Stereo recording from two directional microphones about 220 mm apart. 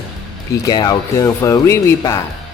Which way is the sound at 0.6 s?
15° left (ahead or behind).